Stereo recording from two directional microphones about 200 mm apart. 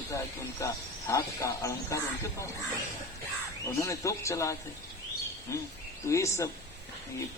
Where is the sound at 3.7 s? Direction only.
15° left (ahead or behind).